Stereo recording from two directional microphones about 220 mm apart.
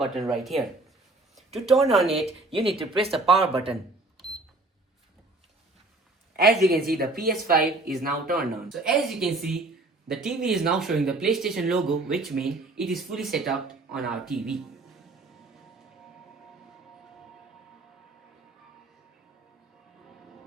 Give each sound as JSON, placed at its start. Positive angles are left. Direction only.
{"t": 0.0, "sound": "speech", "side_deg": 0}
{"t": 2.2, "sound": "speech", "side_deg": -25}
{"t": 6.6, "sound": "speech", "side_deg": -45}
{"t": 7.5, "sound": "speech", "side_deg": 0}
{"t": 8.0, "sound": "speech", "side_deg": -40}
{"t": 8.7, "sound": "speech", "side_deg": 0}